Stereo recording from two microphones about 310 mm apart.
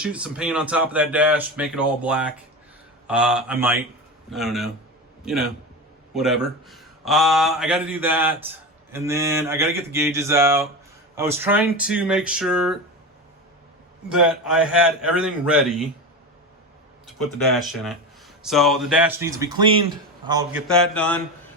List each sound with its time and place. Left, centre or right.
0.0 s a man's voice: centre
8.9 s a sound: centre
11.1 s speech: centre
14.1 s speech: centre
17.1 s speech: centre
20.2 s a sound: centre
20.7 s speech: centre